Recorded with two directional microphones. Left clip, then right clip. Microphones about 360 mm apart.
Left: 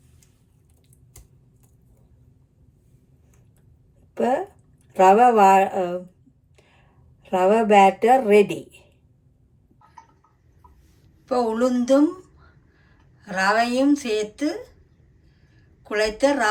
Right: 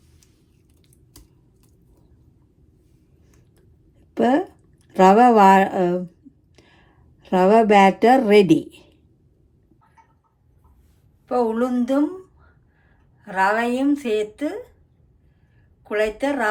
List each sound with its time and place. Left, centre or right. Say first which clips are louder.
4.1 s a woman's voice: right 3 dB; right
7.2 s a woman's voice: right 3 dB; right
11.3 s a woman's voice: even; centre
15.8 s a woman's voice: left 1 dB; centre